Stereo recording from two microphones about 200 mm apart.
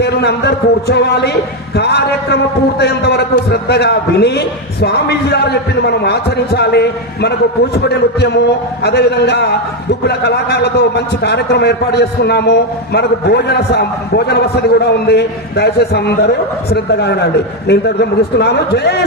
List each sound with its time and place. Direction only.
0.0 s speech: 55° left (ahead or behind)